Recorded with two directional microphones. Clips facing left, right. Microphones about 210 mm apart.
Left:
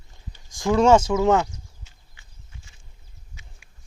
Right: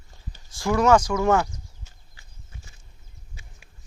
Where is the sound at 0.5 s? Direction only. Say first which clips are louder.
Left 2 dB; 20° left (ahead or behind).